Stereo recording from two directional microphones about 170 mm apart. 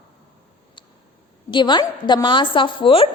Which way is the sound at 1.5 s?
25° left (ahead or behind).